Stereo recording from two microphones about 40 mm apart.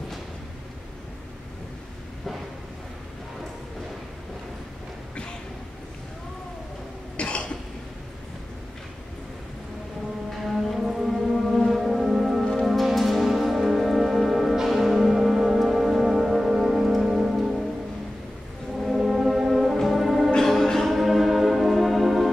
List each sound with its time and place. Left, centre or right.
7.2 s cough: left
10.3 s music: centre
17.4 s music: centre
18.8 s brass instrument: centre
19.8 s music: centre
20.4 s music: centre